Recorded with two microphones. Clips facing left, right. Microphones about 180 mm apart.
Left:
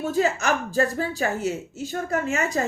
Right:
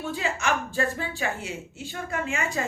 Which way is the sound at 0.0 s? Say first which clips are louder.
Left 6 dB; 40° left (ahead or behind).